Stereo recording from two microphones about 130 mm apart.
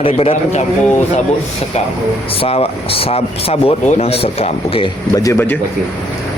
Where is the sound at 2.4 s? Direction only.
50° left (ahead or behind).